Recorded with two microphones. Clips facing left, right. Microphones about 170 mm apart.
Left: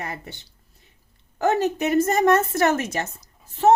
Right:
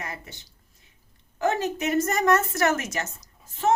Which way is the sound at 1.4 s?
35° left (ahead or behind).